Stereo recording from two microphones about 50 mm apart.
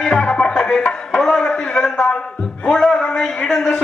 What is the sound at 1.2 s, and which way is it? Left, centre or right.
A man's voice, centre.